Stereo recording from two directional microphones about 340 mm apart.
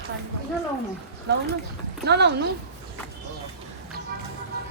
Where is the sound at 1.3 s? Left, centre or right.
Right.